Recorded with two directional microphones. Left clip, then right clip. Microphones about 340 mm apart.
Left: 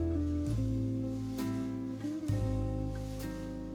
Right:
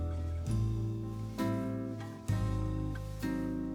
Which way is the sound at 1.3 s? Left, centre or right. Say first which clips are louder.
Right 5 dB; centre.